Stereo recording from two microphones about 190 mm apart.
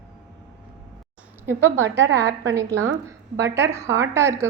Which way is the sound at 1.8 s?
70° right (ahead or behind).